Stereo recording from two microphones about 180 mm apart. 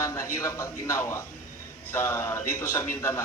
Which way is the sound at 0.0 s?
15° left (ahead or behind).